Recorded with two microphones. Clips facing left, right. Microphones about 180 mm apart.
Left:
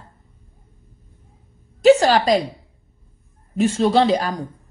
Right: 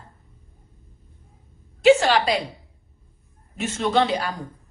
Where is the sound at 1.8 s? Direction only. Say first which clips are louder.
Left 3 dB; 40° left (ahead or behind).